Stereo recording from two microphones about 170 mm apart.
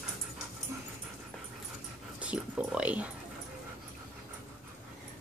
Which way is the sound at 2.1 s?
5° right (ahead or behind).